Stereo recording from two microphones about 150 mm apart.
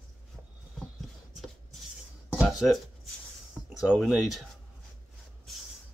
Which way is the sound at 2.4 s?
5° right (ahead or behind).